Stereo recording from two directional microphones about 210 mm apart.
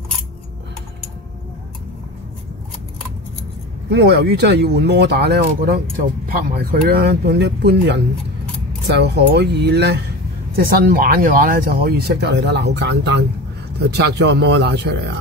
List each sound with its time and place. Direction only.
3.9 s speech: 50° right (ahead or behind)